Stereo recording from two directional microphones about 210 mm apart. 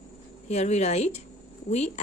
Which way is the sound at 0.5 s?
30° left (ahead or behind).